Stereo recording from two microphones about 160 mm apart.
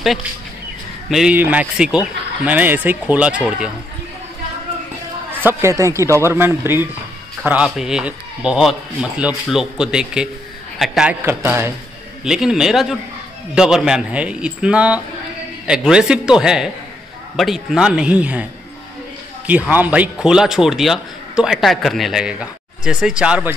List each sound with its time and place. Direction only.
1.1 s speech: 5° right (ahead or behind)
5.4 s a man's voice: 15° right (ahead or behind)
11.2 s speech: 15° right (ahead or behind)
12.3 s a man's voice: 5° right (ahead or behind)
19.7 s a man's voice: 10° right (ahead or behind)